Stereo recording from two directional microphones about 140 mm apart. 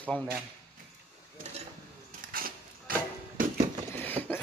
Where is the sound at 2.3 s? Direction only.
90° right.